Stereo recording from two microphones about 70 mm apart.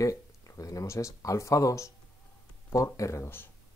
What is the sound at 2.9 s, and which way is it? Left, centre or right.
Speech, left.